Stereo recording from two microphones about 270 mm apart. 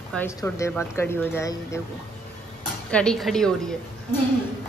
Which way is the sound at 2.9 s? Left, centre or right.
Centre.